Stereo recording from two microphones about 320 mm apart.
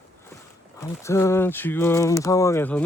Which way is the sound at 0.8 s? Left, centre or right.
Centre.